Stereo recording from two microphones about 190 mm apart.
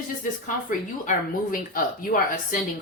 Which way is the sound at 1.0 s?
45° left (ahead or behind).